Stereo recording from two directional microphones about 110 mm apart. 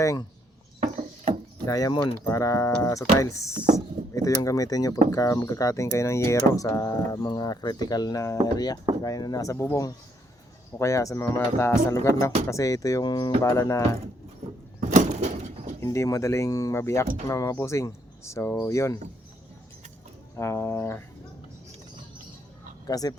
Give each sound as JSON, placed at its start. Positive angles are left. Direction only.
{"t": 0.0, "sound": "speech", "side_deg": 30}
{"t": 1.6, "sound": "speech", "side_deg": 35}
{"t": 7.2, "sound": "speech", "side_deg": 40}
{"t": 13.4, "sound": "speech", "side_deg": 30}
{"t": 14.8, "sound": "a sound", "side_deg": -90}
{"t": 15.8, "sound": "speech", "side_deg": 30}
{"t": 20.3, "sound": "speech", "side_deg": 25}
{"t": 22.9, "sound": "speech", "side_deg": 35}